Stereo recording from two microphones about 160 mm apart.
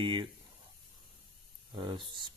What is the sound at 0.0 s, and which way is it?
Speech, 30° right (ahead or behind).